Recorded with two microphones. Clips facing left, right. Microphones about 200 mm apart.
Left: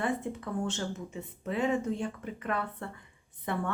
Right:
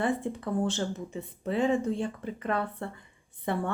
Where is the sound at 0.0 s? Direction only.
30° right (ahead or behind).